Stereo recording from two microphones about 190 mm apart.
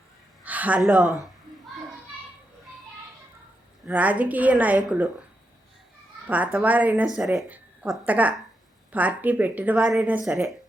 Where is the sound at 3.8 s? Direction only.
10° right (ahead or behind).